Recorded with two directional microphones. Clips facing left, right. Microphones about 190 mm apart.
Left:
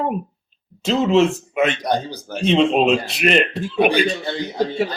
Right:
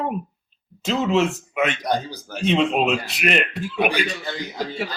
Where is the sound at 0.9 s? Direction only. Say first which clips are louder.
Left 4 dB; 30° left (ahead or behind).